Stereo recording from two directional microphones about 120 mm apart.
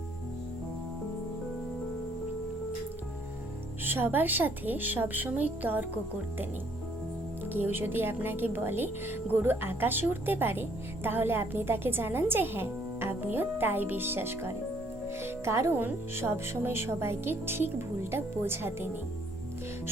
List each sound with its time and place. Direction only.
3.8 s a woman's voice: 15° right (ahead or behind)
7.5 s a woman's voice: 15° right (ahead or behind)